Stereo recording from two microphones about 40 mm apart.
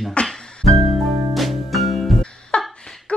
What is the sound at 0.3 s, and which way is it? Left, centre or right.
Music, left.